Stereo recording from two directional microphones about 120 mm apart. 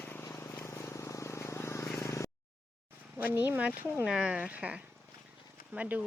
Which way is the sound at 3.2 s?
15° right (ahead or behind).